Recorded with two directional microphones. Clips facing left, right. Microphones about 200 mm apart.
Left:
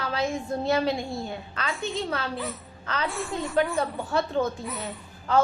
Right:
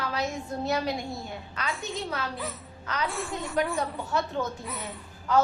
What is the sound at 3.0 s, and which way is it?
A woman's voice, centre (ahead or behind).